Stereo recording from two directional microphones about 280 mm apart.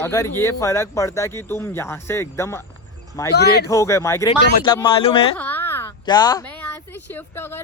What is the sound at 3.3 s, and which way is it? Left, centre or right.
Speech, left.